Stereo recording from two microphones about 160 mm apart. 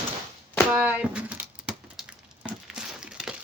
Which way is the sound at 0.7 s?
5° right (ahead or behind).